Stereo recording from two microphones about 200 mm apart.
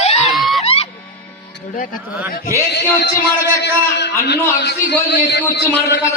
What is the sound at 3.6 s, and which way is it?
A man's voice, 60° left (ahead or behind).